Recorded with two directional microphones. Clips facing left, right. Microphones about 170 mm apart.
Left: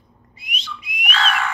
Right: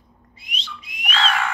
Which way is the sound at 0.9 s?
10° left (ahead or behind).